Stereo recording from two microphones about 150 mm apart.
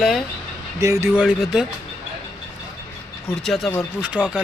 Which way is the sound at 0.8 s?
20° right (ahead or behind).